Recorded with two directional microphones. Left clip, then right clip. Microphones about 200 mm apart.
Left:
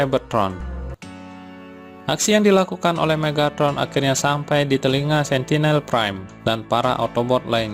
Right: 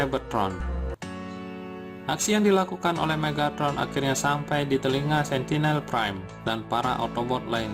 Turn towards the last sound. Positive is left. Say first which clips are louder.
# left 8 dB
turn(degrees=30)  # may be behind; listen again after turning